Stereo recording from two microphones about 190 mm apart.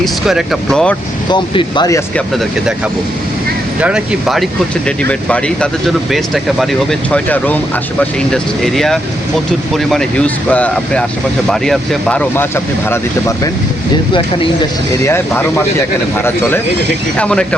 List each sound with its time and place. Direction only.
0.0 s speech: centre (ahead or behind)
1.3 s speech: 25° left (ahead or behind)
2.1 s speech: centre (ahead or behind)
3.8 s speech: 5° right (ahead or behind); by 13.5 s 15° left (ahead or behind)
15.0 s speech: 10° left (ahead or behind)